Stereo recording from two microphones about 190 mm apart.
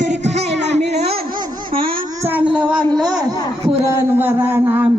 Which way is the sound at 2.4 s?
5° right (ahead or behind).